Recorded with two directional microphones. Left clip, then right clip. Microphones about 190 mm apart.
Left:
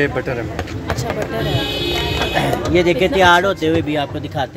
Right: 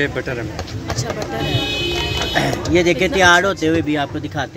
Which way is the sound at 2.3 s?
25° right (ahead or behind).